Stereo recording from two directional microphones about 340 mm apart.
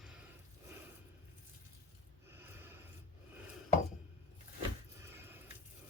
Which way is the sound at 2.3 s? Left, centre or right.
Centre.